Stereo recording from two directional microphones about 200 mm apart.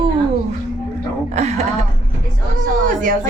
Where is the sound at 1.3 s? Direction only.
35° right (ahead or behind).